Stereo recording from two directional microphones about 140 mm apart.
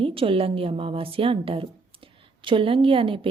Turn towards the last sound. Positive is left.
turn(degrees=-40)  # may be behind; listen again after turning